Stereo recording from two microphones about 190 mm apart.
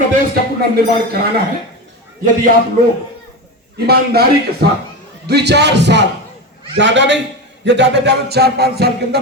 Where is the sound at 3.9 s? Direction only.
55° right (ahead or behind).